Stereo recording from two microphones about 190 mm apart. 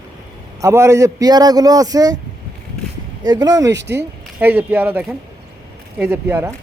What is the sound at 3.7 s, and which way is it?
Speech, 65° right (ahead or behind).